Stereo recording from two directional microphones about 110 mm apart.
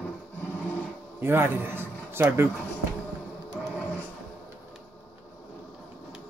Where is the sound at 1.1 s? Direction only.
20° right (ahead or behind).